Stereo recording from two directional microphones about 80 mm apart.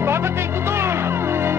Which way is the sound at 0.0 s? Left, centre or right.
Right.